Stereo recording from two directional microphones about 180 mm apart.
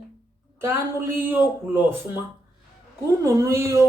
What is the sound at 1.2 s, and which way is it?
Speech, 10° right (ahead or behind).